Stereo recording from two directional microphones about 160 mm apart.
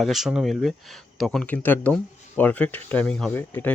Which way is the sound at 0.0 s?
Centre (ahead or behind).